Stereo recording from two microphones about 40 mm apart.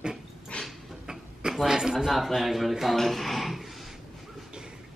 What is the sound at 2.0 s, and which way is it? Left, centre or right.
Speech, centre.